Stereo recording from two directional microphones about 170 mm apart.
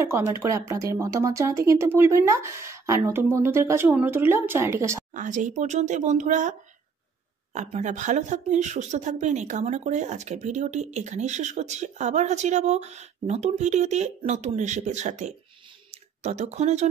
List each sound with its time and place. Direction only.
0.0 s speech: 15° right (ahead or behind)
5.1 s speech: 50° right (ahead or behind)
7.5 s speech: 45° right (ahead or behind)
15.9 s a sound: 40° right (ahead or behind)